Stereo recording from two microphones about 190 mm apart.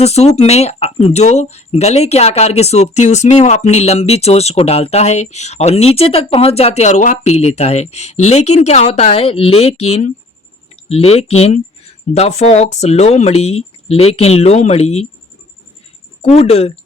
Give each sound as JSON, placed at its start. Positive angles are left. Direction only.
{"t": 0.0, "sound": "speech", "side_deg": 35}
{"t": 16.2, "sound": "speech", "side_deg": 30}